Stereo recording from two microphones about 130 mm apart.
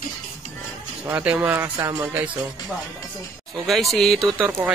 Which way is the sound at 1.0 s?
10° right (ahead or behind).